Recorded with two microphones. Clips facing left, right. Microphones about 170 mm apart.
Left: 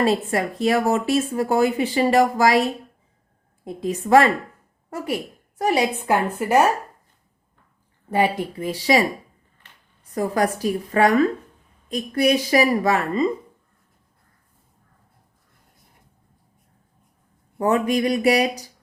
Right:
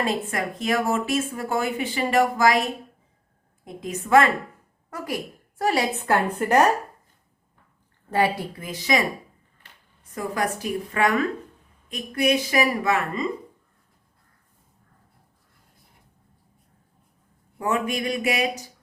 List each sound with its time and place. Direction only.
0.0 s speech: 35° left (ahead or behind)
3.6 s speech: 35° left (ahead or behind)
5.5 s a woman's voice: 20° left (ahead or behind)
8.1 s speech: 20° left (ahead or behind); by 13.2 s 35° left (ahead or behind)
17.6 s speech: 35° left (ahead or behind)